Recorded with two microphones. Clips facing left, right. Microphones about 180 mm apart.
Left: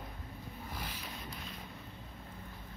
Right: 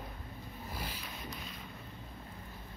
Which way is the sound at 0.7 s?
10° right (ahead or behind).